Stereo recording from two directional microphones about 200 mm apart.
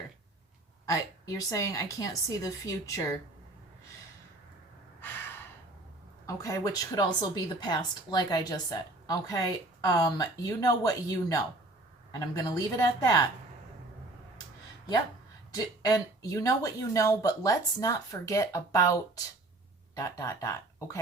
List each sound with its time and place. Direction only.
0.9 s speech: 15° left (ahead or behind)
4.9 s gasp: 10° left (ahead or behind)
6.2 s a woman's voice: 15° left (ahead or behind)
15.5 s speech: 20° left (ahead or behind)
20.0 s speech: 15° left (ahead or behind)